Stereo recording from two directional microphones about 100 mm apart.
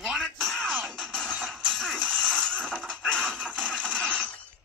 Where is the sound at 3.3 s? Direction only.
15° right (ahead or behind).